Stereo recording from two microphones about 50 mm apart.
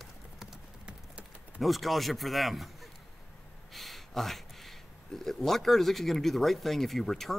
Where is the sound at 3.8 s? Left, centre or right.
Centre.